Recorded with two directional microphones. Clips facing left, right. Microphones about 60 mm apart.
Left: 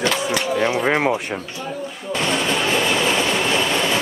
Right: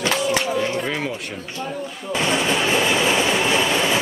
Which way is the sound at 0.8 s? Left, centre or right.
Left.